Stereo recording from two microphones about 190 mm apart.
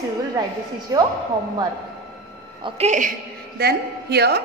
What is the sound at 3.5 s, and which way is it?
Speech, 60° right (ahead or behind).